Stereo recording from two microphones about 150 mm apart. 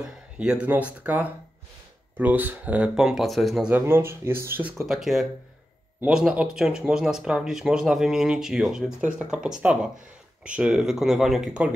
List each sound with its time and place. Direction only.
0.0 s speech: 5° right (ahead or behind)
3.7 s speech: 15° right (ahead or behind)
4.8 s speech: centre (ahead or behind)